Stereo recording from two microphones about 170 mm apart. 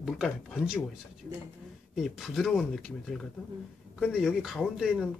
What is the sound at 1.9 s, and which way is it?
Speech, centre (ahead or behind).